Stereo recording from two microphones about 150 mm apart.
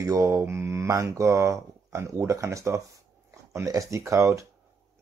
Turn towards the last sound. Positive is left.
turn(degrees=-20)  # may be behind; listen again after turning